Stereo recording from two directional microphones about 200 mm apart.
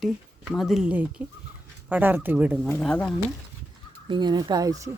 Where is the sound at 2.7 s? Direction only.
5° left (ahead or behind).